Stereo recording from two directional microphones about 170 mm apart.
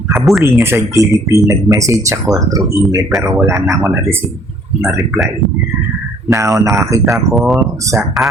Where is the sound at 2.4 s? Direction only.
20° right (ahead or behind).